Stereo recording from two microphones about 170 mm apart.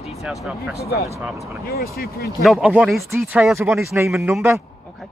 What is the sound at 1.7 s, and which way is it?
Speech, 65° left (ahead or behind).